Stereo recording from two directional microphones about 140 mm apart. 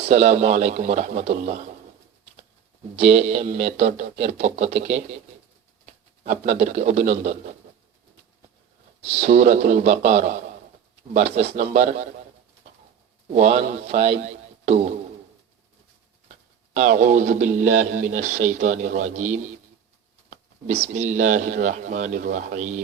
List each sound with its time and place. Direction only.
0.0 s speech: 50° right (ahead or behind)
2.9 s speech: 50° right (ahead or behind)
6.2 s speech: 55° right (ahead or behind)
9.0 s speech: 50° right (ahead or behind)
13.3 s speech: 50° right (ahead or behind)
16.7 s speech: 55° right (ahead or behind)
20.8 s speech: 55° right (ahead or behind)